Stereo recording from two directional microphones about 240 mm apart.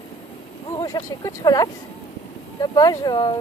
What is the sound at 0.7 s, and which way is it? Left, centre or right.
Speech, centre.